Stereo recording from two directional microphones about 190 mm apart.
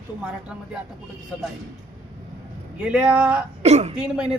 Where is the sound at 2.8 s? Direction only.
5° right (ahead or behind).